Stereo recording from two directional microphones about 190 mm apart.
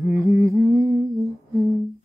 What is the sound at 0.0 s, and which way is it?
Humming, 15° right (ahead or behind).